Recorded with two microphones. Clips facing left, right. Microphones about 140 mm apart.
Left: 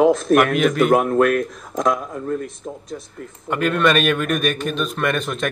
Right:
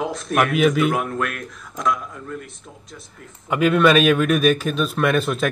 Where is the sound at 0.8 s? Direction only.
45° left (ahead or behind).